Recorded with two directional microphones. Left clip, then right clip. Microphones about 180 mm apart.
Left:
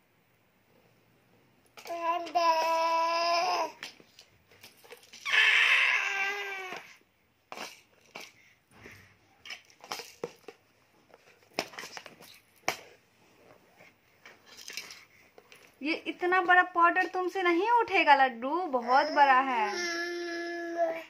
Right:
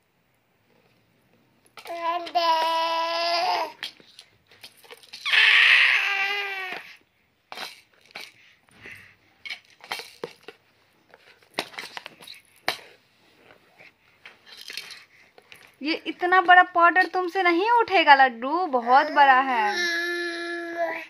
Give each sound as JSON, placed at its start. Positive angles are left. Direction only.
{"t": 1.8, "sound": "child singing", "side_deg": 10}
{"t": 2.7, "sound": "baby cry", "side_deg": 20}
{"t": 3.6, "sound": "babbling", "side_deg": 5}
{"t": 4.8, "sound": "baby cry", "side_deg": 15}
{"t": 7.4, "sound": "cutlery", "side_deg": 10}
{"t": 9.4, "sound": "cutlery", "side_deg": 5}
{"t": 11.1, "sound": "a sound", "side_deg": 5}
{"t": 14.2, "sound": "a sound", "side_deg": 10}
{"t": 15.8, "sound": "speech", "side_deg": -30}
{"t": 19.7, "sound": "child singing", "side_deg": 20}